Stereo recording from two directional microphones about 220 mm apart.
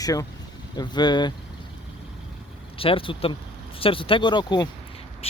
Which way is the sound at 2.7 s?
25° left (ahead or behind).